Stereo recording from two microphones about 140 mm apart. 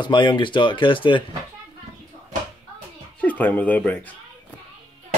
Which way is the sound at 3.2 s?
10° left (ahead or behind).